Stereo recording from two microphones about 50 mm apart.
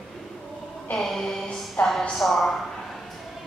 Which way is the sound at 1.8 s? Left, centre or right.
Left.